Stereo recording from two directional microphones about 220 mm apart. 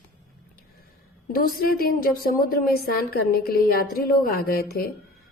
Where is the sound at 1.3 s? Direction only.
40° left (ahead or behind).